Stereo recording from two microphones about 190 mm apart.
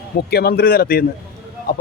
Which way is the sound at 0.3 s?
55° left (ahead or behind).